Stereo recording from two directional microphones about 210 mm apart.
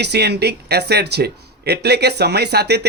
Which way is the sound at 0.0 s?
50° right (ahead or behind).